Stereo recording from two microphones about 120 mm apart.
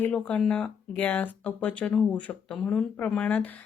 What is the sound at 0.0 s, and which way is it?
Speech, 10° left (ahead or behind).